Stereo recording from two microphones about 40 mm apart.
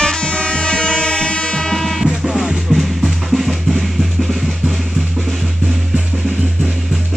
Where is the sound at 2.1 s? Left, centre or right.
Centre.